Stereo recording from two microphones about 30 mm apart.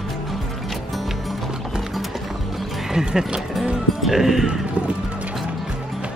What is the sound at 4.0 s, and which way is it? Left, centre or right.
Speech, centre.